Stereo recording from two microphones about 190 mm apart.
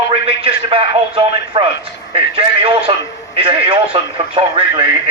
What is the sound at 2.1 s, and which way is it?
A man's voice, 30° right (ahead or behind).